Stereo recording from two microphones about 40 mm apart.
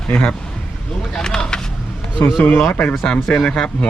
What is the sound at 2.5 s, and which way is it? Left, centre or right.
Speech, left.